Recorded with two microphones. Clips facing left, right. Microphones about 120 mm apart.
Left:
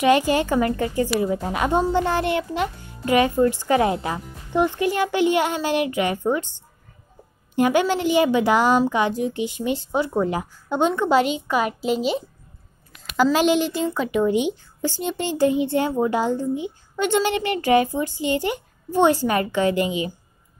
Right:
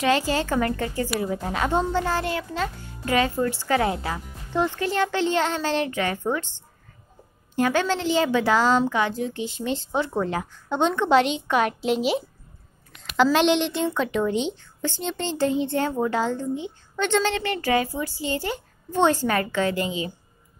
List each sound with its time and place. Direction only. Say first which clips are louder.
0.0 s a woman's voice: left 4 dB; 15° left (ahead or behind)
7.5 s a woman's voice: left 3 dB; 15° left (ahead or behind)